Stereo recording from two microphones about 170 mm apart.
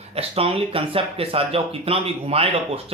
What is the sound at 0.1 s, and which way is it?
Speech, 35° right (ahead or behind).